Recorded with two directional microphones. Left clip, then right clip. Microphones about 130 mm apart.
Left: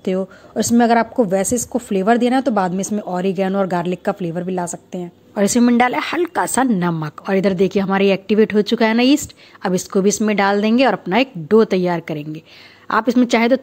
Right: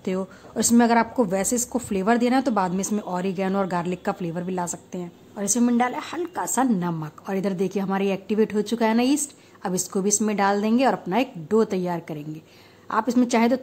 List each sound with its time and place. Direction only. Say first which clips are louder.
0.0 s a woman's voice: left 7 dB; 25° left (ahead or behind)
5.3 s a woman's voice: left 8 dB; 45° left (ahead or behind); by 13.6 s 25° left (ahead or behind)